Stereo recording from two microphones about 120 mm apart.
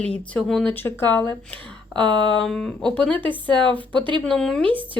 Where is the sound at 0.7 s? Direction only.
20° left (ahead or behind).